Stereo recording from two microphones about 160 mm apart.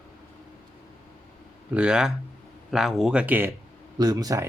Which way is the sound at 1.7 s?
5° right (ahead or behind).